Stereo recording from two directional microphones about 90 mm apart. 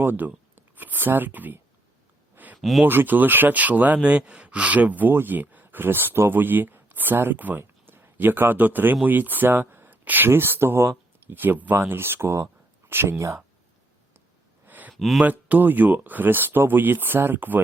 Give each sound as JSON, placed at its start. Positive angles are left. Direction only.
{"t": 0.0, "sound": "speech", "side_deg": -20}
{"t": 2.3, "sound": "a sound", "side_deg": -20}
{"t": 2.6, "sound": "speech", "side_deg": 0}
{"t": 2.8, "sound": "speech", "side_deg": -20}
{"t": 14.7, "sound": "a sound", "side_deg": -20}
{"t": 14.9, "sound": "speech", "side_deg": 0}
{"t": 15.2, "sound": "speech", "side_deg": -20}